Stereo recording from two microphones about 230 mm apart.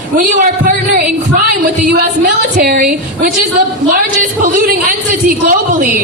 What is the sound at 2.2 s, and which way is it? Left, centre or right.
A woman's voice, right.